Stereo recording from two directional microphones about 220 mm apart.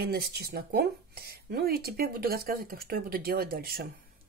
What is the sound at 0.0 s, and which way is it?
Speech, 45° right (ahead or behind).